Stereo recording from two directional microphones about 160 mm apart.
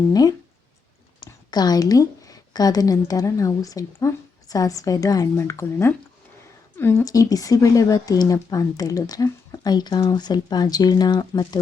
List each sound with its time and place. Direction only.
0.1 s a woman's voice: 25° left (ahead or behind)